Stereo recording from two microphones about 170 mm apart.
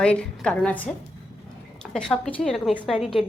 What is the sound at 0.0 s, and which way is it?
A woman's voice, 5° left (ahead or behind).